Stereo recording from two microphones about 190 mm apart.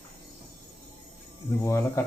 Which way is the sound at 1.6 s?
15° left (ahead or behind).